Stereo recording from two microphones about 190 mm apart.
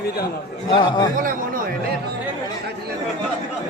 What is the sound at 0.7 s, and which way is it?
Speech, 25° left (ahead or behind).